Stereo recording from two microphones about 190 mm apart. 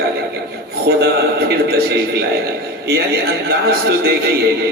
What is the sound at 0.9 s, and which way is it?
Speech, 65° right (ahead or behind).